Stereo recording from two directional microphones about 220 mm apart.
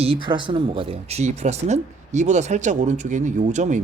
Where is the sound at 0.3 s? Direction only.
20° right (ahead or behind).